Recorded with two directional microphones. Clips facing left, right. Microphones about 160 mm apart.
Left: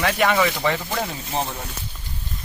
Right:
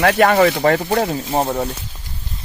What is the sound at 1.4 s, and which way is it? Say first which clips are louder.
Speech: right 10 dB; 65° right (ahead or behind).